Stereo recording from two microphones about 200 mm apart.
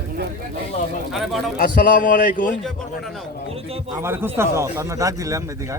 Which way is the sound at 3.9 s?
10° right (ahead or behind).